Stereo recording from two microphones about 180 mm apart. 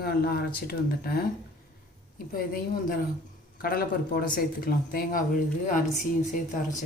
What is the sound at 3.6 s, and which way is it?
A woman's voice, 55° left (ahead or behind).